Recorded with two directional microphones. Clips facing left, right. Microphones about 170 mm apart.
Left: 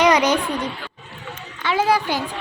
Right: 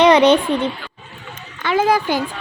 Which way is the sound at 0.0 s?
30° right (ahead or behind).